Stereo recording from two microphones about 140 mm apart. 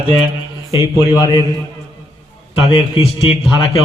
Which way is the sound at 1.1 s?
25° left (ahead or behind).